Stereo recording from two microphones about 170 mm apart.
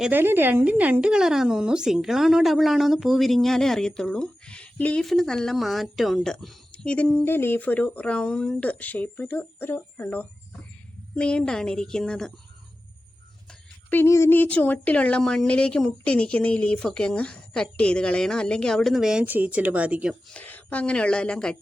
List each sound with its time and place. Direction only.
0.0 s speech: 10° right (ahead or behind)
13.5 s speech: 10° left (ahead or behind); by 20.1 s 10° right (ahead or behind)
20.3 s speech: 10° left (ahead or behind)